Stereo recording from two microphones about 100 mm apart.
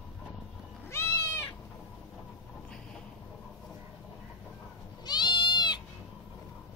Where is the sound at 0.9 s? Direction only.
30° left (ahead or behind).